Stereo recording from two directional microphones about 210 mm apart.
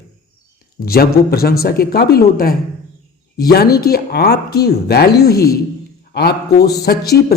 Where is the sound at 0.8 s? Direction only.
45° left (ahead or behind).